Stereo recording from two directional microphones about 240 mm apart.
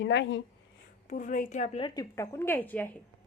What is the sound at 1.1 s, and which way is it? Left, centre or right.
A woman's voice, left.